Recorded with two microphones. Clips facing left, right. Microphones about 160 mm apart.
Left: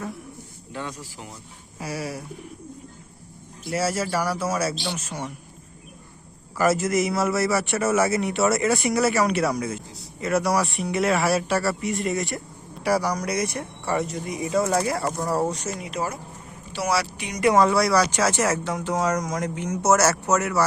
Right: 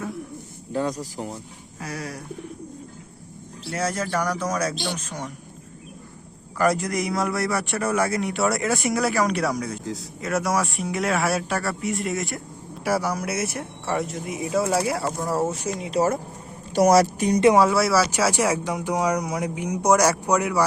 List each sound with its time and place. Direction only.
0.7 s speech: 40° right (ahead or behind)
1.8 s speech: 10° left (ahead or behind)
3.7 s speech: 5° left (ahead or behind)
6.6 s a man's voice: 5° left (ahead or behind)
9.8 s a man's voice: 90° right
10.2 s a man's voice: centre (ahead or behind)
15.8 s speech: 35° right (ahead or behind)
17.6 s speech: 5° right (ahead or behind)